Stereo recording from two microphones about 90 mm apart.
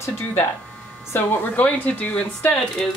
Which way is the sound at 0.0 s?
30° left (ahead or behind).